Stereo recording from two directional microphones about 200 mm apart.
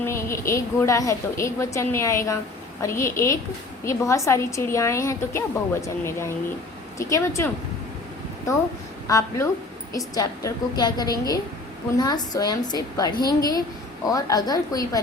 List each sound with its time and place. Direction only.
0.0 s a woman's voice: 15° left (ahead or behind)
9.0 s a woman's voice: 15° left (ahead or behind)